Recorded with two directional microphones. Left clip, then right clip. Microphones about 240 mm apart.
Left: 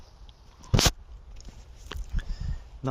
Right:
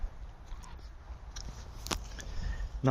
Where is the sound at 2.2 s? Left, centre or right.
Left.